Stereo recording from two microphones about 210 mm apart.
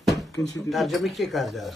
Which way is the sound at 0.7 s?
Centre (ahead or behind).